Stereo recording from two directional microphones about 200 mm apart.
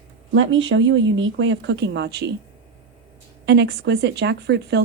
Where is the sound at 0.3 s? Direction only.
70° right (ahead or behind).